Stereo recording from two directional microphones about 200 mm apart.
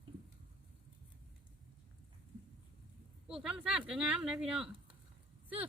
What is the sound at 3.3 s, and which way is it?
Speech, 5° right (ahead or behind).